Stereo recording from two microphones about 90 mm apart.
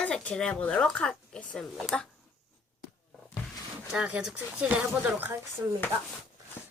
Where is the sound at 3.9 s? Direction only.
10° right (ahead or behind).